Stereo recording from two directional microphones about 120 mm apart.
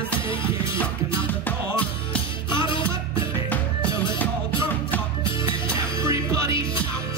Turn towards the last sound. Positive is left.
turn(degrees=-25)  # may be behind; listen again after turning